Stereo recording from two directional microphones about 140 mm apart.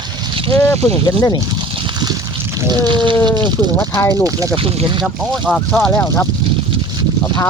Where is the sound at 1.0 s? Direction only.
30° left (ahead or behind).